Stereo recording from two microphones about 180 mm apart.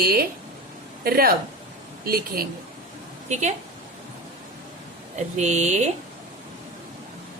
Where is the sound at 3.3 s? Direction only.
40° right (ahead or behind).